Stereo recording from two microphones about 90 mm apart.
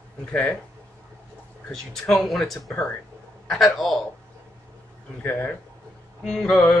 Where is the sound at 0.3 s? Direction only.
15° left (ahead or behind).